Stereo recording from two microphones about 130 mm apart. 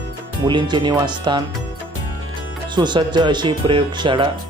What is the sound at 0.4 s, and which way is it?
Speech, 35° right (ahead or behind).